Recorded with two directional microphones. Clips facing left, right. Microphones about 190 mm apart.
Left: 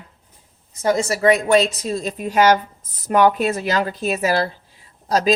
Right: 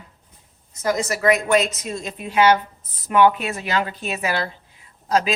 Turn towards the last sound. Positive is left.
turn(degrees=40)  # may be behind; listen again after turning